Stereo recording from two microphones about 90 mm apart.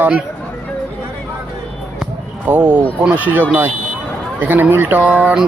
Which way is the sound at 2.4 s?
20° right (ahead or behind).